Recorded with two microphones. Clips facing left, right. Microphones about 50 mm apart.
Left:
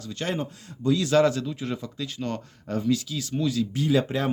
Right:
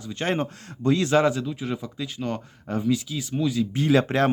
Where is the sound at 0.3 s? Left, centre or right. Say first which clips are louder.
Right 3 dB; right.